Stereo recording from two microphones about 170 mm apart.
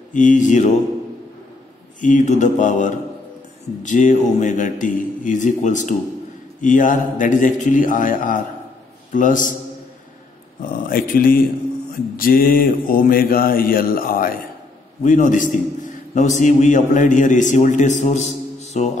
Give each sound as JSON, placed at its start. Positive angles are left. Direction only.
{"t": 0.1, "sound": "a man's voice", "side_deg": 50}
{"t": 2.0, "sound": "a man's voice", "side_deg": 50}
{"t": 10.6, "sound": "mantra", "side_deg": 55}
{"t": 15.0, "sound": "a man's voice", "side_deg": 50}